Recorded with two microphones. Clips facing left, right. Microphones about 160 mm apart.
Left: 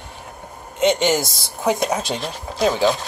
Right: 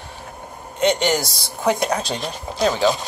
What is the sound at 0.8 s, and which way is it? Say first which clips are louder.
Speech: left 1 dB; 20° left (ahead or behind).